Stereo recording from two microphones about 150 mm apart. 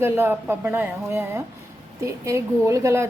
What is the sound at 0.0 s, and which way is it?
Speech, 15° right (ahead or behind).